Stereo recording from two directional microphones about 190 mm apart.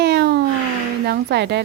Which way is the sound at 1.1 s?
60° right (ahead or behind).